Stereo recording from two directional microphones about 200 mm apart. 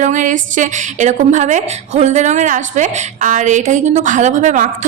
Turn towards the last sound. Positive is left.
turn(degrees=-40)  # may be behind; listen again after turning